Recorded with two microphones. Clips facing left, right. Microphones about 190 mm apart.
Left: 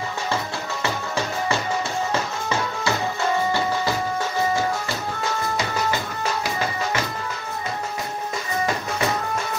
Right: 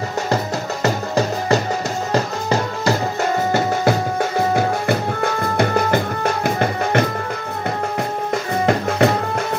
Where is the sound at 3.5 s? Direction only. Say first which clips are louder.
Right 6 dB; 55° right (ahead or behind).